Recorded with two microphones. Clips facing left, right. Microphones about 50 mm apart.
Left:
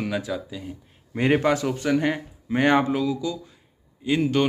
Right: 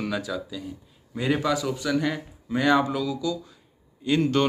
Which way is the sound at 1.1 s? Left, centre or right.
Left.